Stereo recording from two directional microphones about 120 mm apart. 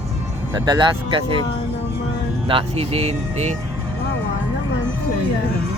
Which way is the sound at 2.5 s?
50° right (ahead or behind).